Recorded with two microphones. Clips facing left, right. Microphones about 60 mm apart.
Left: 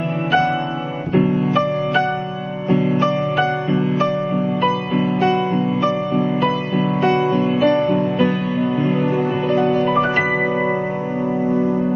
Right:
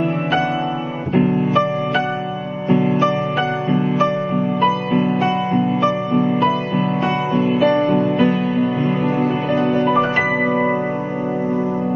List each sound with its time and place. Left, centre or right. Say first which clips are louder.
1.1 s music: right 1 dB; centre
4.6 s music: right 4 dB; centre